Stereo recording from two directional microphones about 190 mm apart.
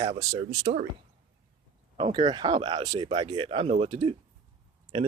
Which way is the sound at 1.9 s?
25° right (ahead or behind).